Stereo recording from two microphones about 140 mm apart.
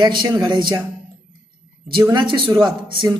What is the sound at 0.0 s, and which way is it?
Speech, 35° right (ahead or behind).